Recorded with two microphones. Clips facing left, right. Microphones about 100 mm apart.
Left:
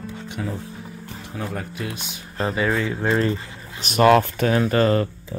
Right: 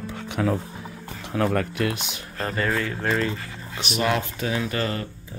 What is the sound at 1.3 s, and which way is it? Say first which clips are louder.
Speech: right 8 dB; 75° right (ahead or behind).